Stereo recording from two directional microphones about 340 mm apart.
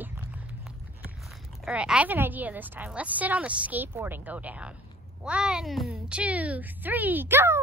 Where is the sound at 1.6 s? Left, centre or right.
Centre.